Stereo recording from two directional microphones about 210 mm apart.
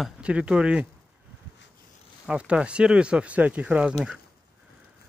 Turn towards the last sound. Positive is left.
turn(degrees=-5)  # may be behind; listen again after turning